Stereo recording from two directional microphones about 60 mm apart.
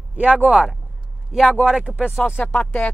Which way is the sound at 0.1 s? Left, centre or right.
Right.